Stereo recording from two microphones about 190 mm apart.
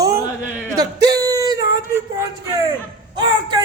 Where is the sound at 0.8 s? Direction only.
20° right (ahead or behind).